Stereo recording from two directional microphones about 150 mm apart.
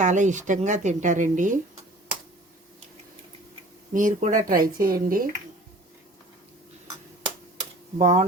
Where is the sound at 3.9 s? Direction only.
60° right (ahead or behind).